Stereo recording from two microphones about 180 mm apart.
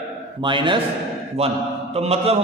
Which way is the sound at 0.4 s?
25° right (ahead or behind).